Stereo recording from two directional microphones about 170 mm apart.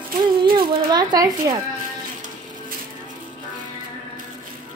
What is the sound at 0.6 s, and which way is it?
Speech, 25° right (ahead or behind).